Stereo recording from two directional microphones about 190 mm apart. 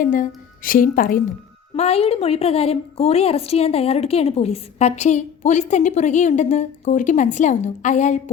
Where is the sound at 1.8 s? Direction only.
35° left (ahead or behind).